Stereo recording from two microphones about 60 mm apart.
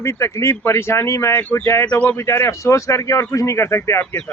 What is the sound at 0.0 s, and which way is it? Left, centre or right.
Speech, left.